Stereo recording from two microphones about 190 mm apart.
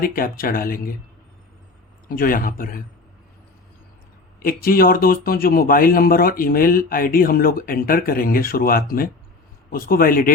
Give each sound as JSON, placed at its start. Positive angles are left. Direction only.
{"t": 0.0, "sound": "speech", "side_deg": 50}
{"t": 2.0, "sound": "speech", "side_deg": 50}
{"t": 4.4, "sound": "speech", "side_deg": 50}